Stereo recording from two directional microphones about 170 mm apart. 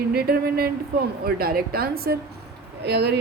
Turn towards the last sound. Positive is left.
turn(degrees=-75)  # may be behind; listen again after turning